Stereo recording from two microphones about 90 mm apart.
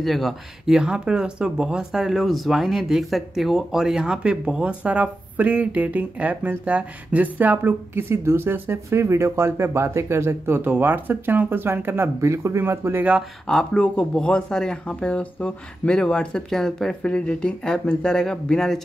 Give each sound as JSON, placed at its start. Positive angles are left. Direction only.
{"t": 0.0, "sound": "speech", "side_deg": 0}
{"t": 13.5, "sound": "speech", "side_deg": 10}